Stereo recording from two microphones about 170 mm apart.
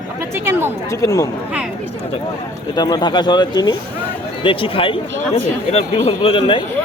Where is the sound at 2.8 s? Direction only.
25° left (ahead or behind).